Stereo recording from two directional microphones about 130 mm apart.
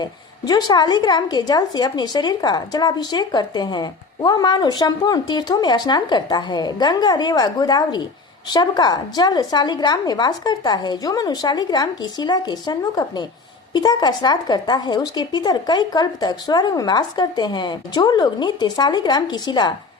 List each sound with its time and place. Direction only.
0.0 s a woman's voice: 30° left (ahead or behind)